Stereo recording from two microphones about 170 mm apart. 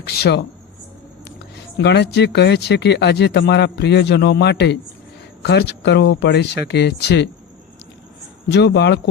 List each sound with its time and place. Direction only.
0.0 s speech: 70° left (ahead or behind)
1.8 s speech: 80° left
8.4 s speech: 85° left